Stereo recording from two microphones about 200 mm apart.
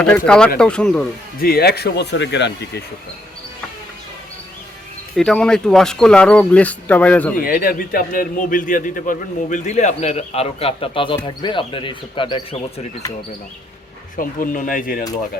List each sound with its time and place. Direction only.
0.0 s speech: 5° left (ahead or behind)
1.4 s speech: 50° left (ahead or behind)
5.1 s speech: 5° left (ahead or behind)
7.4 s a man's voice: 45° left (ahead or behind); by 13.1 s 25° left (ahead or behind)
14.2 s speech: 45° left (ahead or behind)